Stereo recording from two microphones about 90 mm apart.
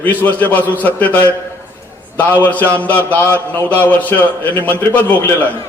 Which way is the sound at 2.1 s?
20° left (ahead or behind).